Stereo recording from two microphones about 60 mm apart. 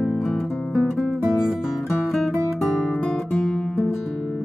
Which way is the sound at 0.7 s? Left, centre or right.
Centre.